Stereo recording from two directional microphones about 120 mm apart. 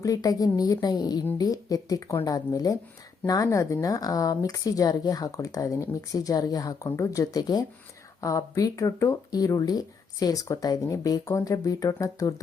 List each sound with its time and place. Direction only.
0.0 s a woman's voice: 30° left (ahead or behind)